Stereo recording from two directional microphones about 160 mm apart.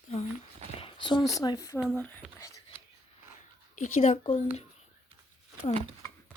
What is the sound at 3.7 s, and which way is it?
Speech, 45° left (ahead or behind).